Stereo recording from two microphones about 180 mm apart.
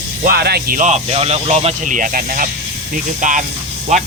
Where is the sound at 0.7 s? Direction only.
40° right (ahead or behind).